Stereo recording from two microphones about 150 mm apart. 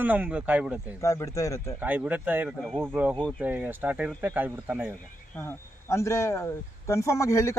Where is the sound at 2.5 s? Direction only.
5° left (ahead or behind).